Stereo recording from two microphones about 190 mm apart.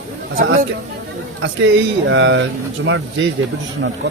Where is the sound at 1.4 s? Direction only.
85° right.